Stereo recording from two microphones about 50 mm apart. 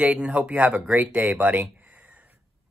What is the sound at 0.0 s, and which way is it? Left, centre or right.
Speech, right.